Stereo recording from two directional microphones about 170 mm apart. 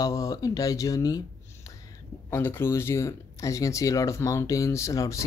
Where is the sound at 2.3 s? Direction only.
15° left (ahead or behind).